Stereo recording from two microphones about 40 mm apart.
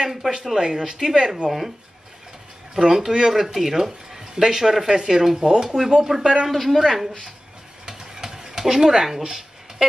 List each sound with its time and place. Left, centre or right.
0.2 s speech: right
2.7 s speech: centre
6.5 s a woman's voice: centre
7.8 s stir: centre